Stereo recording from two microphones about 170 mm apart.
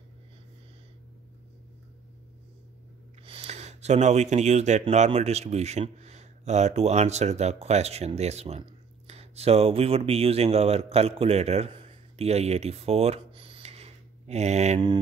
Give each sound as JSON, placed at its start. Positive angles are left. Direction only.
{"t": 3.3, "sound": "speech", "side_deg": -35}